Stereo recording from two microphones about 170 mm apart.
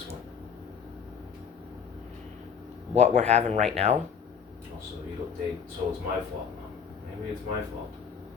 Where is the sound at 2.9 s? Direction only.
40° right (ahead or behind).